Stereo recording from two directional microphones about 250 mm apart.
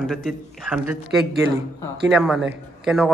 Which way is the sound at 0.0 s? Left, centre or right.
Centre.